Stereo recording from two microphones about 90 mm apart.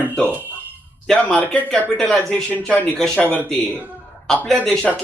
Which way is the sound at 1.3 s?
20° left (ahead or behind).